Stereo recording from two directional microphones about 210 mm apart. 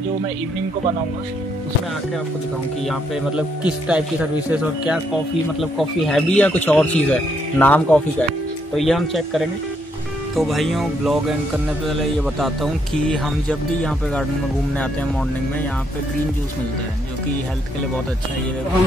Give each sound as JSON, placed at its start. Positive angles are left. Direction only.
{"t": 2.9, "sound": "a man's voice", "side_deg": -5}